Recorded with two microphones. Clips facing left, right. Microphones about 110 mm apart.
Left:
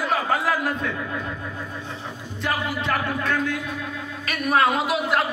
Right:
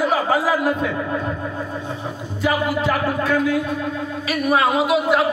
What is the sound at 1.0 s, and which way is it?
Speech, 30° right (ahead or behind).